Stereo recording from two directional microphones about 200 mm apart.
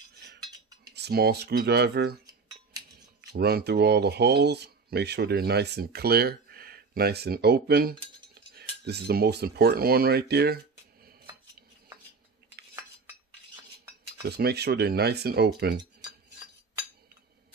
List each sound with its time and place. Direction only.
0.9 s speech: 55° right (ahead or behind)
3.2 s speech: 50° right (ahead or behind)
14.2 s speech: 55° right (ahead or behind)